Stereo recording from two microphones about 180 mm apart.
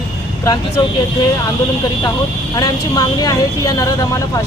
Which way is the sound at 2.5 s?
20° left (ahead or behind).